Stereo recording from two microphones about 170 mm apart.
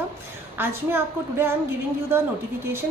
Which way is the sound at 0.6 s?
15° right (ahead or behind).